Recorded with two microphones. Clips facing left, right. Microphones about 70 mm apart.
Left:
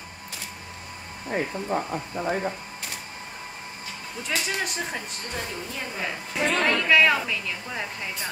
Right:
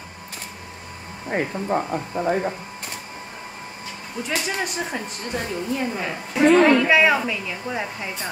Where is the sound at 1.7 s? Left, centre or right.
Right.